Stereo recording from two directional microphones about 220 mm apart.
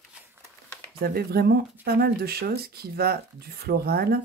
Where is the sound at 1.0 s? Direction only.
45° right (ahead or behind).